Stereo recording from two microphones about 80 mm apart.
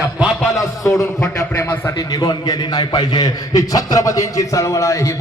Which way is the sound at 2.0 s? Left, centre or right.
Left.